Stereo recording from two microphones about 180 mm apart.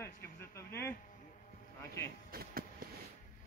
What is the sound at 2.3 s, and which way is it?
Vehicle, 55° right (ahead or behind).